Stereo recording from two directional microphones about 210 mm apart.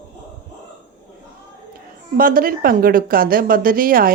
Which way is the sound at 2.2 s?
45° right (ahead or behind).